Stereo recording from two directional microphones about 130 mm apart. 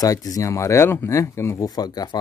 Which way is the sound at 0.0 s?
25° left (ahead or behind).